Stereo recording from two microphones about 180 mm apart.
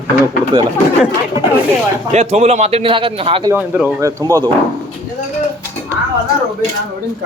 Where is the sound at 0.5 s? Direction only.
25° right (ahead or behind).